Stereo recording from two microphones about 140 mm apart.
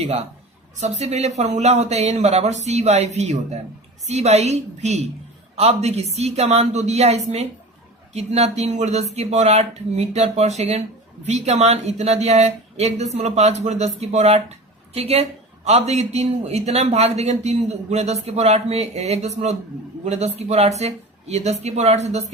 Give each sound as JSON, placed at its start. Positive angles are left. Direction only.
{"t": 0.8, "sound": "a man's voice", "side_deg": -50}